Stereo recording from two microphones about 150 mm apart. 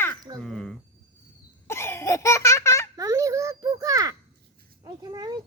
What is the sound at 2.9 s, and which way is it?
A child's voice, 20° right (ahead or behind).